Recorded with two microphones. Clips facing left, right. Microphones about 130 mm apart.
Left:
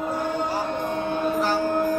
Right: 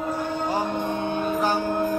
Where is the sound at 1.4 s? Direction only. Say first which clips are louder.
Right 1 dB; 15° right (ahead or behind).